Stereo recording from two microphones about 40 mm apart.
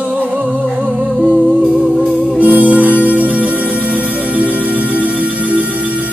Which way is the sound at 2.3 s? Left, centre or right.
Right.